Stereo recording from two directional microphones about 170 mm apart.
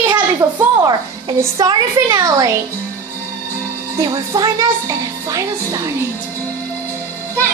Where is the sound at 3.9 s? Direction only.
20° right (ahead or behind).